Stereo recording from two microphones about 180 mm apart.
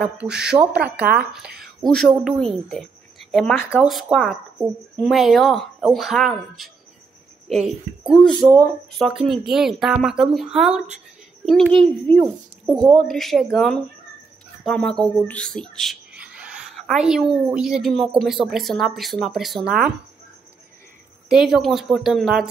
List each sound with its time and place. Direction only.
0.0 s speech: 5° right (ahead or behind)
12.7 s a woman's voice: 25° right (ahead or behind)
13.0 s speech: centre (ahead or behind)
21.3 s speech: centre (ahead or behind)